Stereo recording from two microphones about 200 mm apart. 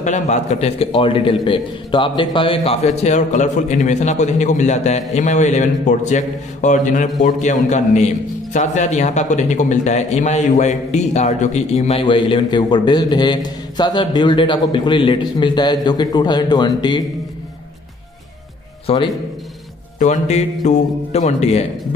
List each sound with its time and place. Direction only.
0.0 s a man's voice: 35° left (ahead or behind)
18.9 s a man's voice: 30° left (ahead or behind)